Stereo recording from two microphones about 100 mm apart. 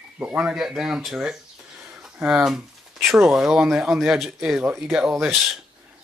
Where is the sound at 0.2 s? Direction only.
10° right (ahead or behind).